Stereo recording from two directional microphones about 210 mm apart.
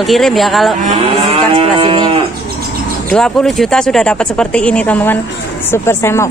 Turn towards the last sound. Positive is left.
turn(degrees=10)  # may be behind; listen again after turning